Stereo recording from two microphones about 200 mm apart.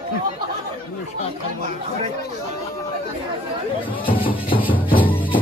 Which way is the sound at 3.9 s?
25° left (ahead or behind).